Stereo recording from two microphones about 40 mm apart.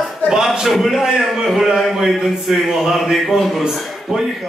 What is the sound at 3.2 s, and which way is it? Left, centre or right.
Speech, centre.